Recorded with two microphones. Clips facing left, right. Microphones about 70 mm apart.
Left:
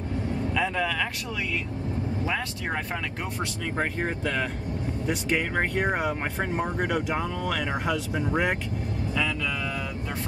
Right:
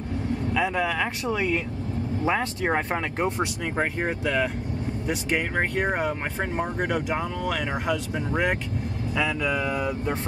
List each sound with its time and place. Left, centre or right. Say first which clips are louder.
0.6 s speech: right 2 dB; centre
1.3 s speech: right 5 dB; right
3.7 s speech: right 1 dB; centre
9.1 s speech: right 4 dB; centre